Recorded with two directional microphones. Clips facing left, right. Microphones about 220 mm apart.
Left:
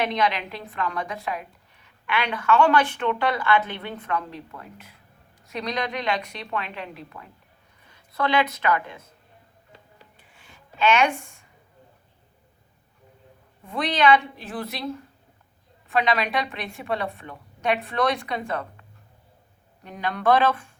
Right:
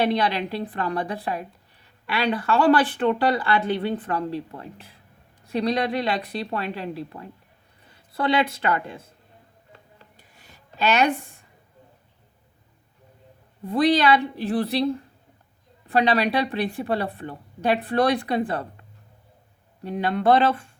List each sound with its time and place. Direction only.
0.0 s a woman's voice: 35° right (ahead or behind)
10.2 s a sound: 40° right (ahead or behind)
13.7 s a woman's voice: 35° right (ahead or behind)